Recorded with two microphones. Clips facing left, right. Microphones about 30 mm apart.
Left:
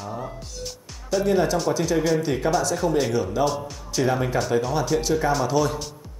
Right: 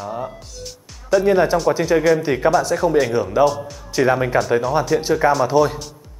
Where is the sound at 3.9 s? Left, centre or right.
Centre.